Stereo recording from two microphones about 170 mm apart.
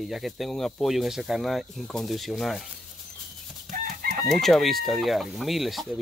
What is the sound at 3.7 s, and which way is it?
Chicken, 55° right (ahead or behind).